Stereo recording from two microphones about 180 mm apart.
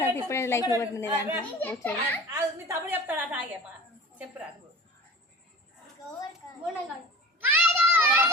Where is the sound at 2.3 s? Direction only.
15° right (ahead or behind).